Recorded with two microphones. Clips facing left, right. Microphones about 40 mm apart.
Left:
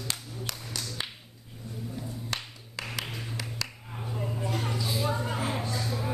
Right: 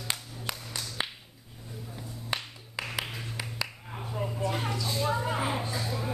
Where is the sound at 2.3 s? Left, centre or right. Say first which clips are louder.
Right 5 dB; centre.